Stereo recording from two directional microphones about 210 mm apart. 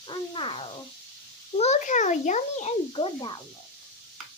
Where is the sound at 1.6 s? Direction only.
35° left (ahead or behind).